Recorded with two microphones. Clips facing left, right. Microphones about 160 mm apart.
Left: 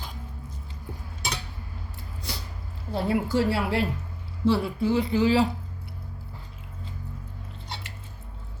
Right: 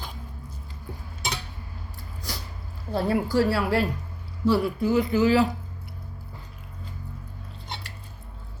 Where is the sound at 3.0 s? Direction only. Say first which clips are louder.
Right 1 dB; 20° left (ahead or behind).